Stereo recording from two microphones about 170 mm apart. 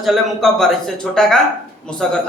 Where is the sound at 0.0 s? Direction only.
Centre (ahead or behind).